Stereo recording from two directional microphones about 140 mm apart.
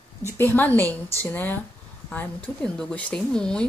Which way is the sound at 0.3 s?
15° left (ahead or behind).